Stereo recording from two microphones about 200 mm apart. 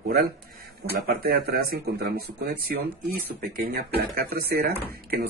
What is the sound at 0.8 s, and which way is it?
Speech, 50° right (ahead or behind).